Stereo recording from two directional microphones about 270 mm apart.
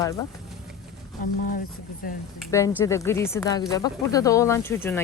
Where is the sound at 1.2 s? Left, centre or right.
Left.